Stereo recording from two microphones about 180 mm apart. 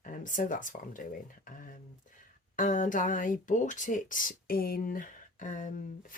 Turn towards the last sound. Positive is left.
turn(degrees=45)  # may be behind; listen again after turning